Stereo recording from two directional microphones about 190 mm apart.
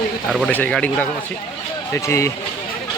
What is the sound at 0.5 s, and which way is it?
Speech, 5° left (ahead or behind).